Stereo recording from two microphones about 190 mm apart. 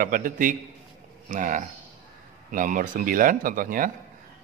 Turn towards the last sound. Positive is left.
turn(degrees=-45)  # may be behind; listen again after turning